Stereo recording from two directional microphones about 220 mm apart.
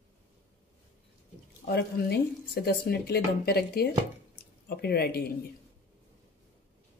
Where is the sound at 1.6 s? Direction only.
45° left (ahead or behind).